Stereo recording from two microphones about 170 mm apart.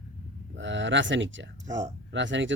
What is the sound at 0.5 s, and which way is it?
Speech, 90° right.